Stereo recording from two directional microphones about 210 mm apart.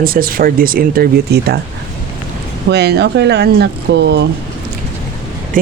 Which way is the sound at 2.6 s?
50° right (ahead or behind).